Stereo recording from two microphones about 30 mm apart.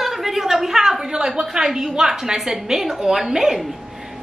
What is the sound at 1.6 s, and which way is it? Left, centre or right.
A woman's voice, centre.